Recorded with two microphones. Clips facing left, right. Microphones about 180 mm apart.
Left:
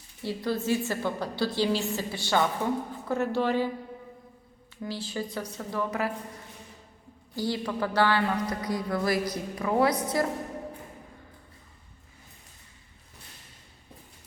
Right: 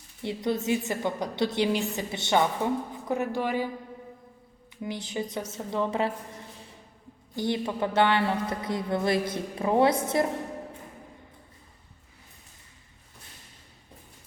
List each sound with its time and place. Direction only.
0.2 s a woman's voice: 20° right (ahead or behind)
4.8 s speech: 20° right (ahead or behind)
7.3 s speech: 20° right (ahead or behind)